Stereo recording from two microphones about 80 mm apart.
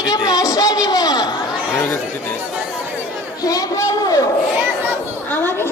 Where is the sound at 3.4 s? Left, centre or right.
Left.